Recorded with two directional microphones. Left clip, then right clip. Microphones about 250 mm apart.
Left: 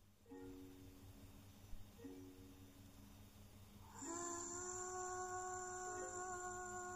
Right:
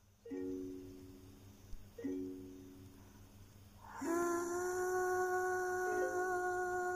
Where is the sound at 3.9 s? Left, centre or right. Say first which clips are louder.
Right 12 dB; right.